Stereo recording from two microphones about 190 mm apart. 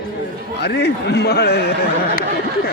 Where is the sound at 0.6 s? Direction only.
60° left (ahead or behind).